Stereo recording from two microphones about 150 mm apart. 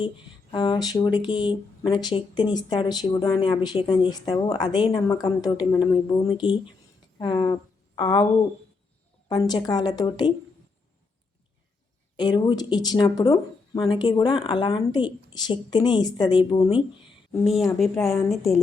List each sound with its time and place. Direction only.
0.5 s speech: 30° left (ahead or behind)
9.3 s speech: 25° left (ahead or behind)
12.1 s speech: 30° left (ahead or behind)
17.4 s a woman's voice: centre (ahead or behind)